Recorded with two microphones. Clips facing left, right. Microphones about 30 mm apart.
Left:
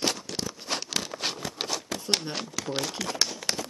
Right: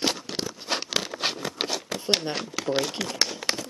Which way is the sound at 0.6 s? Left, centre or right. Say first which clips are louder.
Right 4 dB; centre.